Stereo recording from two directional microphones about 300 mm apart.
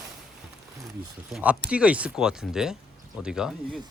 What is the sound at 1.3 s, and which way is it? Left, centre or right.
Speech, centre.